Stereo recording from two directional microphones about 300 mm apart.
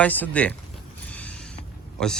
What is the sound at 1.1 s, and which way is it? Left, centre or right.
Creak, centre.